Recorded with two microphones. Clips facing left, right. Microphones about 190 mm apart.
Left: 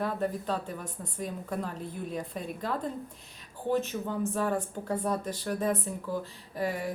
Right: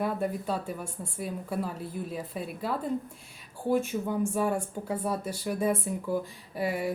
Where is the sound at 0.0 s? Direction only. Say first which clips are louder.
Right 1 dB; 10° right (ahead or behind).